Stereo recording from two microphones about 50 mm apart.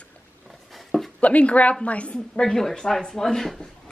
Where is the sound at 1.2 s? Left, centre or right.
Left.